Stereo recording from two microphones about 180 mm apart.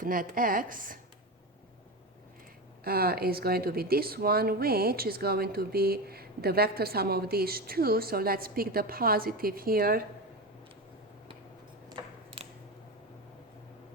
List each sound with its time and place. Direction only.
0.0 s speech: 50° right (ahead or behind)
2.8 s speech: 60° right (ahead or behind)
11.9 s a sound: 30° right (ahead or behind)